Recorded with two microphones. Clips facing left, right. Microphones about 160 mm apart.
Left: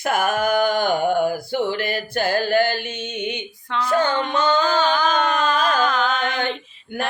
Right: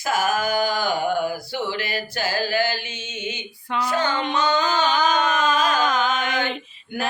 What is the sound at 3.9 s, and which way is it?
Music, 50° left (ahead or behind).